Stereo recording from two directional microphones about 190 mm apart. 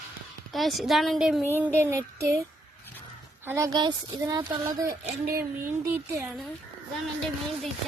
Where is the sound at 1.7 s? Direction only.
15° right (ahead or behind).